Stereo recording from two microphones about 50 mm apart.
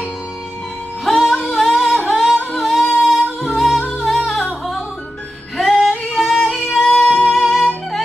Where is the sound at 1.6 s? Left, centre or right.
Centre.